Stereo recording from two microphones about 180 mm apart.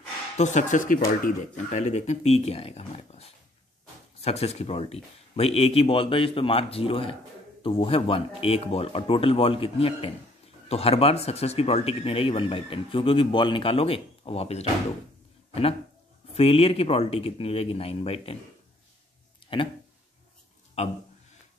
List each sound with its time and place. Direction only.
0.4 s speech: 40° left (ahead or behind)
16.3 s speech: 35° left (ahead or behind)
19.4 s a sound: 30° left (ahead or behind)
20.8 s speech: 40° left (ahead or behind)